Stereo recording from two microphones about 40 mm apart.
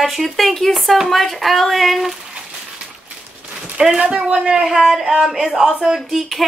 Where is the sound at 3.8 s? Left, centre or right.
Centre.